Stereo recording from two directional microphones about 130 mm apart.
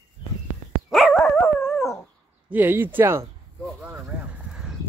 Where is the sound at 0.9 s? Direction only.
Centre (ahead or behind).